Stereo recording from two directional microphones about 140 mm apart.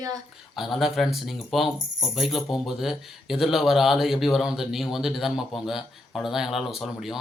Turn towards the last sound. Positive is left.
turn(degrees=0)  # may be behind; listen again after turning